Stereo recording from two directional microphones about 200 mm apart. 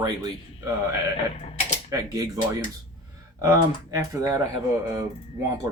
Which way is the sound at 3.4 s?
15° right (ahead or behind).